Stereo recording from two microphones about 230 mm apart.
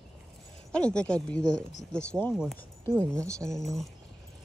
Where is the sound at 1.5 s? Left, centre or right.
Left.